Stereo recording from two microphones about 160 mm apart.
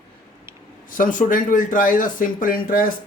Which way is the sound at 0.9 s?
55° left (ahead or behind).